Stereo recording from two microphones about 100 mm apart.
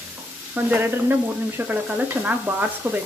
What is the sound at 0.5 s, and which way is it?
Stir, 20° right (ahead or behind).